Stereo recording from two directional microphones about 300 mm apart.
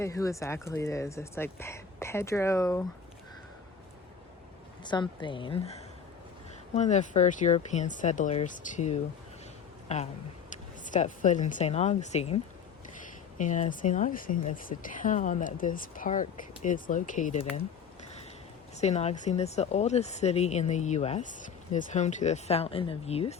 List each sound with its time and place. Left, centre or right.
0.0 s speech: centre
4.8 s speech: centre
10.8 s speech: left
13.4 s speech: left
18.8 s speech: left